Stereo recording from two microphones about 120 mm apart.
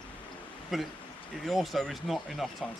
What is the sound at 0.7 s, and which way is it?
Speech, centre (ahead or behind).